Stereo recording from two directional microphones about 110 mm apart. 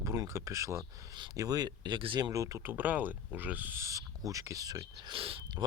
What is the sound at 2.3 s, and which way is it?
Speech, 30° right (ahead or behind).